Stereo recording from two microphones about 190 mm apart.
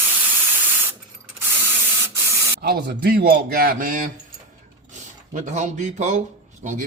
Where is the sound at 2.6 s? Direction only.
55° right (ahead or behind).